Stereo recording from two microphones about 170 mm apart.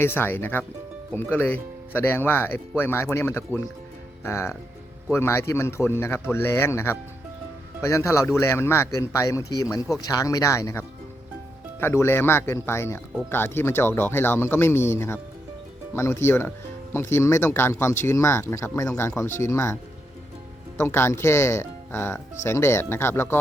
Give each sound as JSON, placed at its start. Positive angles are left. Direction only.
{"t": 0.0, "sound": "speech", "side_deg": 15}
{"t": 20.7, "sound": "speech", "side_deg": 15}